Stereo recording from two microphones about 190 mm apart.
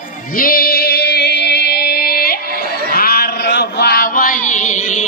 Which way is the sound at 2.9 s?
55° left (ahead or behind).